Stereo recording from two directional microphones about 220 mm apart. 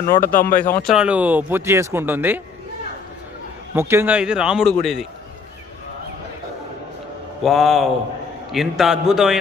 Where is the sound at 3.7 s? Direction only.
10° right (ahead or behind).